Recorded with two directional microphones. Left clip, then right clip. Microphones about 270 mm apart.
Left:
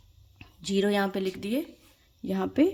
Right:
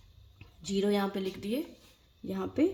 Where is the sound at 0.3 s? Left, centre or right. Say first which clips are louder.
Left 5 dB; left.